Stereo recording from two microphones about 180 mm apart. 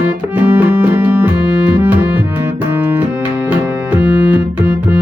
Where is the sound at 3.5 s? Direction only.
10° right (ahead or behind).